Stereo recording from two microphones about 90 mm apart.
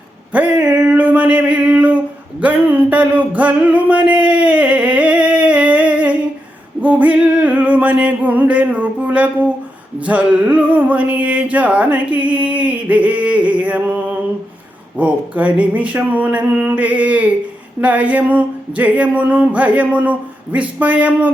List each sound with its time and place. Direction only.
0.3 s a sound: 15° right (ahead or behind)
2.4 s music: 20° right (ahead or behind)
14.9 s music: 15° right (ahead or behind)